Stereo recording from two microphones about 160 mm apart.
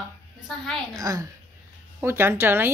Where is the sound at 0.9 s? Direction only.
20° right (ahead or behind).